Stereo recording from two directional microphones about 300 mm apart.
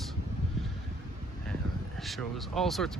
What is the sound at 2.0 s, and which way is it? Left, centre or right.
Speech, centre.